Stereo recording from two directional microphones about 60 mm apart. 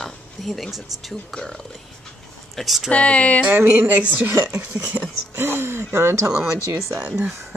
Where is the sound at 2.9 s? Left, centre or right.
Left.